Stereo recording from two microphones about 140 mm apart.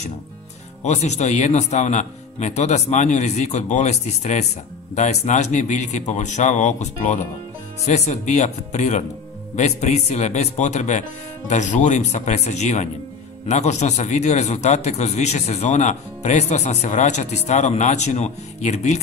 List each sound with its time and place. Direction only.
0.8 s a man's voice: 55° left (ahead or behind)